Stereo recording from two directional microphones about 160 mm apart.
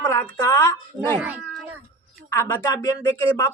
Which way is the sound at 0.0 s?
20° left (ahead or behind).